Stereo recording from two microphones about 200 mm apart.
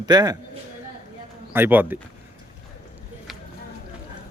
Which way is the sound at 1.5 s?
10° right (ahead or behind).